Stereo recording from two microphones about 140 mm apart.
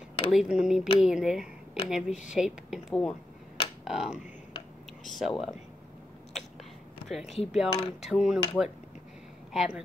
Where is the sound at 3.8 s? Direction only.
Centre (ahead or behind).